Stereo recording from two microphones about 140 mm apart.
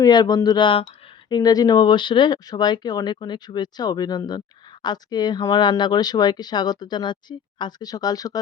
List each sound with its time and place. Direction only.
0.0 s speech: 30° left (ahead or behind)